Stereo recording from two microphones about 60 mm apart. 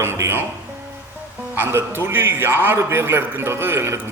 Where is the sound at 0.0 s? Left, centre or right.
Right.